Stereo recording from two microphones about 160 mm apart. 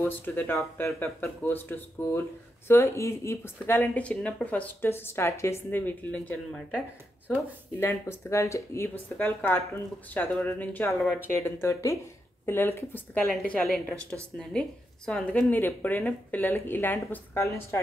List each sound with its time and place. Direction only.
0.0 s speech: 10° left (ahead or behind)
7.8 s speech: 15° left (ahead or behind)
11.3 s speech: 15° left (ahead or behind)